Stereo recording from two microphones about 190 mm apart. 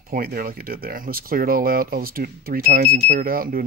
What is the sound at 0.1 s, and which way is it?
Speech, 50° right (ahead or behind).